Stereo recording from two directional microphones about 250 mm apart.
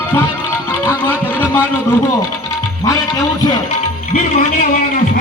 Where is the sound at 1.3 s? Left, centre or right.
Centre.